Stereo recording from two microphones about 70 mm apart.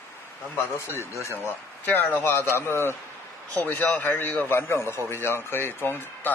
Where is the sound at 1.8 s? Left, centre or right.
Left.